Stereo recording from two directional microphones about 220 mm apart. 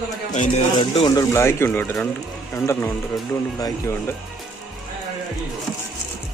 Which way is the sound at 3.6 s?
10° left (ahead or behind).